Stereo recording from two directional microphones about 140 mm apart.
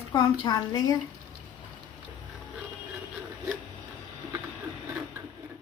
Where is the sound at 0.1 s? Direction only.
25° left (ahead or behind).